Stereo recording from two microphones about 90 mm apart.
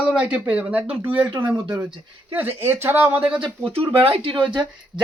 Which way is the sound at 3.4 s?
90° right.